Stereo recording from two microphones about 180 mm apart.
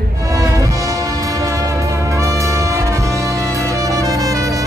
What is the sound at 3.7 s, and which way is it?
Saxophone, 15° right (ahead or behind).